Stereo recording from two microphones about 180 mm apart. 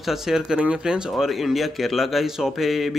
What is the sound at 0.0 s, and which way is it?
Speech, centre (ahead or behind).